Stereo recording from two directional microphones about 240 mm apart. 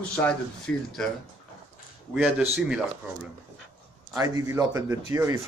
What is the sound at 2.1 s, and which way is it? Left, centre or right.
Speech, centre.